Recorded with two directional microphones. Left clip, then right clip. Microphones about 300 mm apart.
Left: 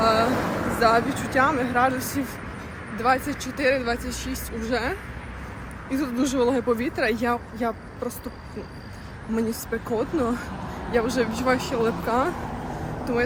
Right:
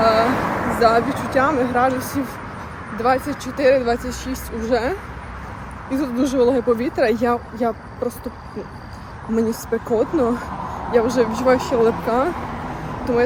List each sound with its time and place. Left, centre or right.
0.0 s vehicle: centre
0.3 s vehicle: centre
0.8 s speech: centre
9.3 s speech: centre
11.8 s speech: centre
12.0 s speech: centre